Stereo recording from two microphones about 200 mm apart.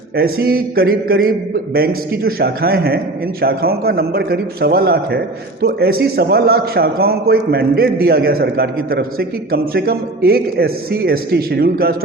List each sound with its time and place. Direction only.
0.2 s a man's voice: 50° right (ahead or behind)